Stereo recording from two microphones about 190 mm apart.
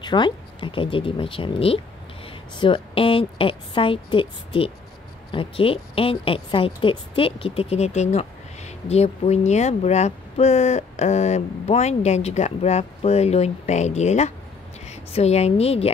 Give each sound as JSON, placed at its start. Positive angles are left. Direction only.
{"t": 0.0, "sound": "a woman's voice", "side_deg": 25}